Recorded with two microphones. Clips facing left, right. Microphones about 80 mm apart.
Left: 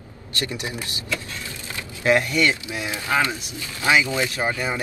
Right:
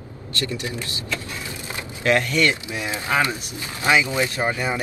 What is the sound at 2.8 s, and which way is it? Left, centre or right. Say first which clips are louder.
Speech: right 1 dB; right.